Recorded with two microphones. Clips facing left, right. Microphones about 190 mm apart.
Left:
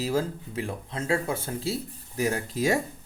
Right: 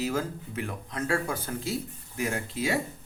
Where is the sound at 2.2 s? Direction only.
40° left (ahead or behind).